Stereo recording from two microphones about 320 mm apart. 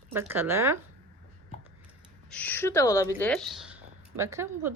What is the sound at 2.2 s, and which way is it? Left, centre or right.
A woman's voice, centre.